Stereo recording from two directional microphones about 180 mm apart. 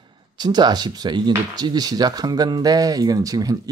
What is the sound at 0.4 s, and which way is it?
Speech, 25° right (ahead or behind).